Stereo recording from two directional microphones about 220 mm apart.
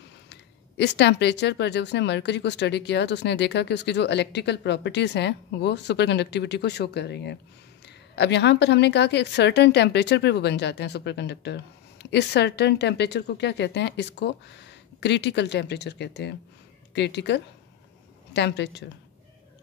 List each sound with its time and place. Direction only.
0.3 s speech: 50° left (ahead or behind)